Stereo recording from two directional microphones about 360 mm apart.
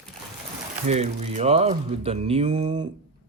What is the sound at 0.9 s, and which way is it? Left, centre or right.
Speech, centre.